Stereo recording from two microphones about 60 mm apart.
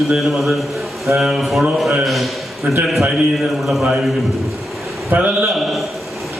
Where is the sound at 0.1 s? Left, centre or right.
Centre.